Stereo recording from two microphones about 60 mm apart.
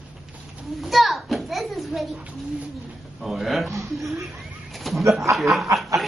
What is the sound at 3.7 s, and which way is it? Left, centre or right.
Speech, right.